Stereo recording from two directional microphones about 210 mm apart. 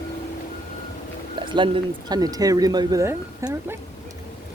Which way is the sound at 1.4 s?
25° right (ahead or behind).